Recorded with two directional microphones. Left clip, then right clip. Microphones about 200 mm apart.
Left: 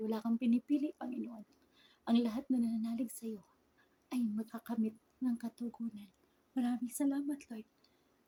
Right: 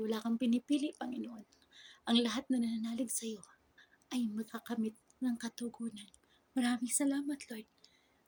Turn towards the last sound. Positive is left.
turn(degrees=5)  # may be behind; listen again after turning